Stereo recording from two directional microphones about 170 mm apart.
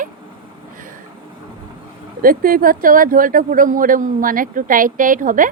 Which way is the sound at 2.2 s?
55° right (ahead or behind).